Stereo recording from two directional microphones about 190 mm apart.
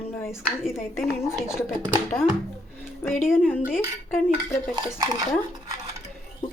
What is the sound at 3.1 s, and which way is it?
Speech, centre (ahead or behind).